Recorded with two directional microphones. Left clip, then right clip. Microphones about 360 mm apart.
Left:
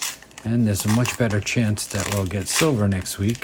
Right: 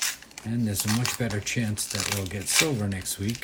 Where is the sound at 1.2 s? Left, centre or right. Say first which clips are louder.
Left 7 dB; centre.